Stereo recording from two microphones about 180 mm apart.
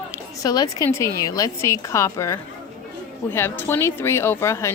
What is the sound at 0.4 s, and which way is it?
Speech, 20° left (ahead or behind).